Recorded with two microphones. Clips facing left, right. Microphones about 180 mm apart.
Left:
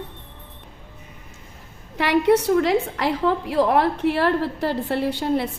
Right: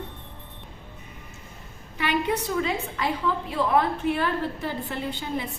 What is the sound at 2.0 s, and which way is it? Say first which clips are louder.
A woman's voice: left 8 dB; 80° left.